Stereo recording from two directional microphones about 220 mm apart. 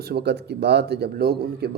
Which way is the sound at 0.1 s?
50° right (ahead or behind).